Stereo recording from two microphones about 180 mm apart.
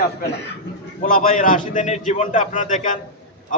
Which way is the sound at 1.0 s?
50° left (ahead or behind).